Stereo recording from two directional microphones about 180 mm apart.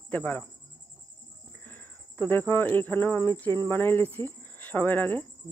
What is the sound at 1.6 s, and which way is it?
Speech, 10° left (ahead or behind).